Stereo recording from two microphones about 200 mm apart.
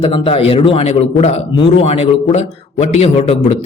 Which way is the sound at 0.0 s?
30° left (ahead or behind).